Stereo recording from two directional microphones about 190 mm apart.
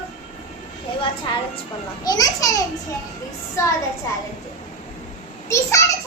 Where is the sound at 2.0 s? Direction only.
20° left (ahead or behind).